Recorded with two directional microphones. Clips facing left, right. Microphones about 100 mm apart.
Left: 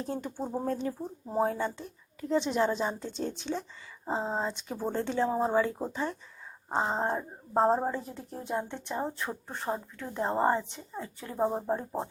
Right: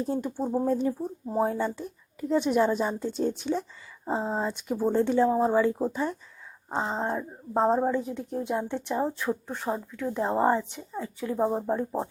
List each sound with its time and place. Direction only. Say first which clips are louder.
0.1 s speech: right 6 dB; 10° right (ahead or behind)
5.3 s speech: right 4 dB; centre (ahead or behind)
6.7 s a sound: even; 10° left (ahead or behind)
7.5 s speech: right 2 dB; 5° left (ahead or behind)